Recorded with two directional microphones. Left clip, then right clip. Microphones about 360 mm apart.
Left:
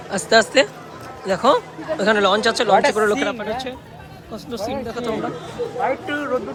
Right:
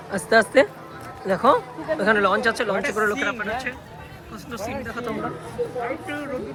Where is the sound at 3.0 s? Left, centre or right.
Centre.